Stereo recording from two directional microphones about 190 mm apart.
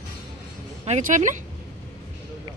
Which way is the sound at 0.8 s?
40° right (ahead or behind).